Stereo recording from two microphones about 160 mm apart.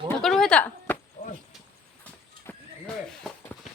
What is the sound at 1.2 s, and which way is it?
Chop, 50° left (ahead or behind).